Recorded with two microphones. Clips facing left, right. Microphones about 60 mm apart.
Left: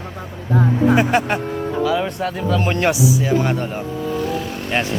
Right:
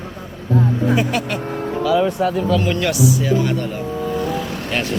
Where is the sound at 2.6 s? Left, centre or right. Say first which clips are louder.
Even; left.